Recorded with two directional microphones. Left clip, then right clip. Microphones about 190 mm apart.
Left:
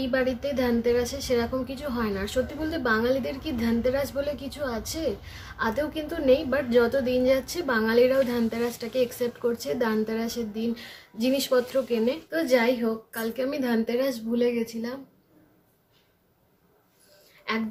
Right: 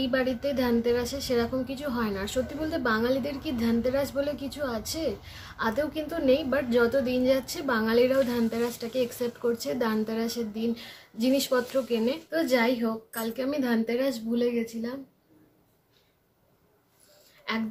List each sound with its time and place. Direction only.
0.0 s a woman's voice: 5° right (ahead or behind)
17.5 s a woman's voice: 5° right (ahead or behind)